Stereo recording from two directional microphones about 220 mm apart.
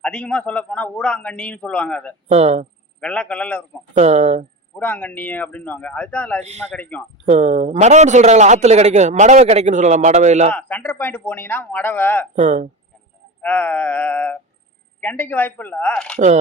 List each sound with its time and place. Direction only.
0.0 s a man's voice: 5° left (ahead or behind)
2.3 s speech: 30° right (ahead or behind)
3.0 s a man's voice: 5° left (ahead or behind)
3.9 s a man's voice: 30° right (ahead or behind)
4.8 s speech: 10° left (ahead or behind)
7.3 s a man's voice: 30° right (ahead or behind)
10.5 s speech: 5° left (ahead or behind)
12.4 s a man's voice: 35° right (ahead or behind)
13.4 s speech: 5° left (ahead or behind)
16.1 s a man's voice: 30° right (ahead or behind)